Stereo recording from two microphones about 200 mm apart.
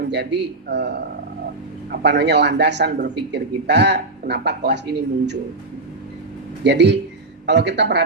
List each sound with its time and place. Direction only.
0.0 s speech: 60° right (ahead or behind)
6.7 s speech: 60° right (ahead or behind)